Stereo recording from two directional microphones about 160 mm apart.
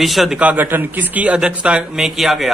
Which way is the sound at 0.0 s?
Centre (ahead or behind).